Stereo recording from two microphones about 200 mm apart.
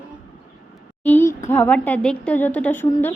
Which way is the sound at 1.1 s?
10° left (ahead or behind).